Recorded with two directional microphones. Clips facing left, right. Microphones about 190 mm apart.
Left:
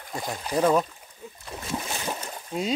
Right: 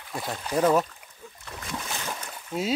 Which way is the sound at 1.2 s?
20° left (ahead or behind).